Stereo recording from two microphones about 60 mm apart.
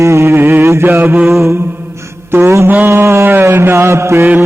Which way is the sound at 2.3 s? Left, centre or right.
Right.